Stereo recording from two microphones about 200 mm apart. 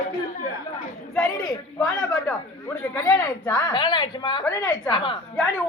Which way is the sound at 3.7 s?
20° left (ahead or behind).